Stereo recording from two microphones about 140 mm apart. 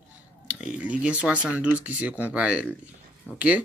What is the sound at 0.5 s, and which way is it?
Speech, 10° right (ahead or behind).